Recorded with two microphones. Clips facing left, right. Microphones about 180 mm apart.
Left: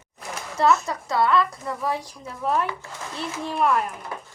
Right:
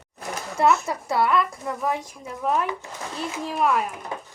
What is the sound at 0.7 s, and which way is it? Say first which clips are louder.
Speech: left 1 dB; 25° right (ahead or behind).